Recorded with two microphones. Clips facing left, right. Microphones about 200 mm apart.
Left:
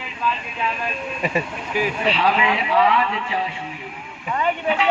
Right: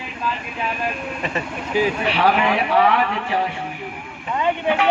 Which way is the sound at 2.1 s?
65° right (ahead or behind).